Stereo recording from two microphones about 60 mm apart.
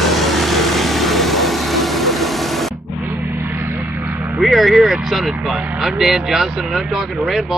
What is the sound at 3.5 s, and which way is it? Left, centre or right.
Vehicle, right.